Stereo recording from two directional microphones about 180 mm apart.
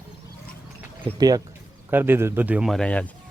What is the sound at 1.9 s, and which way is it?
A man's voice, 10° right (ahead or behind).